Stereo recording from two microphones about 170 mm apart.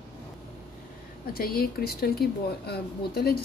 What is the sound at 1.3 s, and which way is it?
Speech, 65° left (ahead or behind).